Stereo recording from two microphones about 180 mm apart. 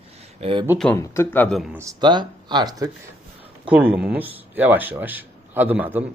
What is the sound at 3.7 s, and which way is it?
Speech, 5° right (ahead or behind).